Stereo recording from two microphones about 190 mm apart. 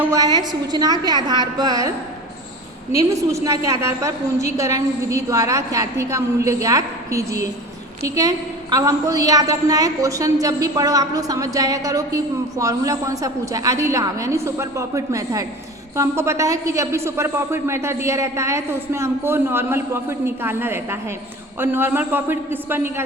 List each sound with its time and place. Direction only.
0.0 s a woman's voice: 15° right (ahead or behind)
2.9 s a woman's voice: 15° right (ahead or behind)